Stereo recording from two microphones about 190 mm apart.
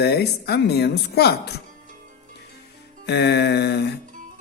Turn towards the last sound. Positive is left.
turn(degrees=60)  # may be behind; listen again after turning